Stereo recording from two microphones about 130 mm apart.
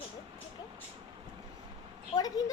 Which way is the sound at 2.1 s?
30° left (ahead or behind).